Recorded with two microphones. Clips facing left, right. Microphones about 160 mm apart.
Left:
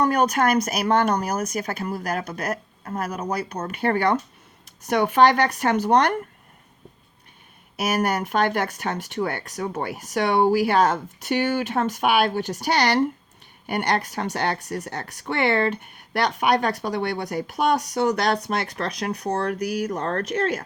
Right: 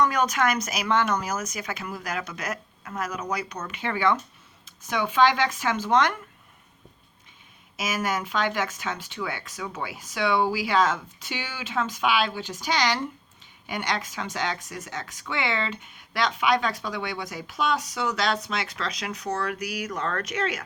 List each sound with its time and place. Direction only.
0.1 s speech: 55° left (ahead or behind)
1.8 s speech: 35° left (ahead or behind)
2.0 s speech: 55° left (ahead or behind)
2.5 s a sound: 30° left (ahead or behind)
3.1 s speech: 30° left (ahead or behind)
3.7 s speech: 50° left (ahead or behind)
4.9 s speech: 60° left (ahead or behind)
5.9 s speech: 40° left (ahead or behind)
7.8 s speech: 60° left (ahead or behind)
9.6 s speech: 45° left (ahead or behind)
19.5 s speech: 10° right (ahead or behind)
20.0 s speech: 45° left (ahead or behind)